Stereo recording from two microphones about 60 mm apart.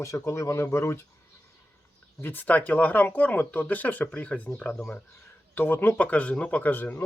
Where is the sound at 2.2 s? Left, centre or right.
Left.